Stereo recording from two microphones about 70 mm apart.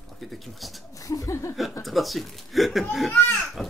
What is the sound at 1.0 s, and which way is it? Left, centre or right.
Speech, left.